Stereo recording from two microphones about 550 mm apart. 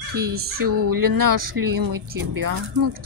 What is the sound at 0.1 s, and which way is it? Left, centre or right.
A woman's voice, right.